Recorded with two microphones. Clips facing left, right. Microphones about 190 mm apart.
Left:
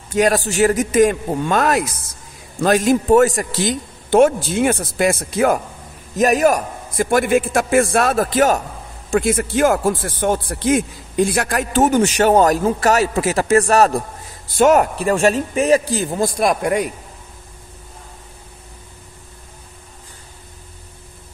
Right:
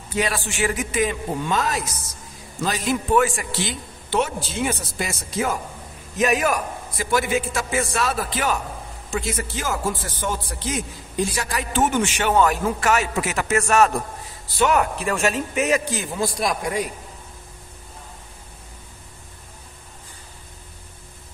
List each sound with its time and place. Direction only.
0.1 s a man's voice: 45° left (ahead or behind); by 1.9 s 60° left (ahead or behind)
2.6 s a man's voice: 50° left (ahead or behind)
6.1 s a man's voice: 40° left (ahead or behind)
9.1 s a man's voice: 55° left (ahead or behind)
11.7 s a man's voice: 40° left (ahead or behind)
16.3 s a man's voice: 60° left (ahead or behind)